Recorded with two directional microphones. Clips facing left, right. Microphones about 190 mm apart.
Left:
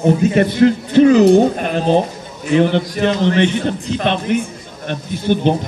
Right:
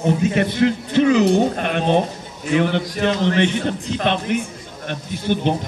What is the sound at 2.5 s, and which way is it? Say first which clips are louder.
A man's voice: left 5 dB; 30° left (ahead or behind).